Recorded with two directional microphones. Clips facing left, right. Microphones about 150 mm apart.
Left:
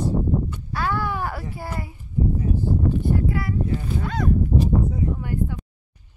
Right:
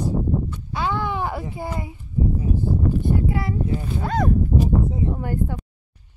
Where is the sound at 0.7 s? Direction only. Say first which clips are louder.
Right 1 dB; 20° right (ahead or behind).